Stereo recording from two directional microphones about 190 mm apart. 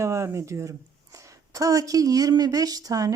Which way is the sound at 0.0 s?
15° right (ahead or behind).